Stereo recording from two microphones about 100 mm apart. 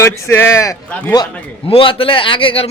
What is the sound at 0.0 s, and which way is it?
Speech, 25° left (ahead or behind).